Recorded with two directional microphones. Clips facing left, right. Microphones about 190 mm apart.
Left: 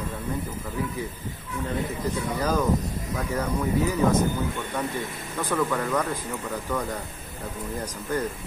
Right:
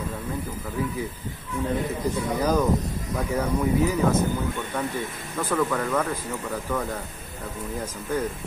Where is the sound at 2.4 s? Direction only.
10° right (ahead or behind).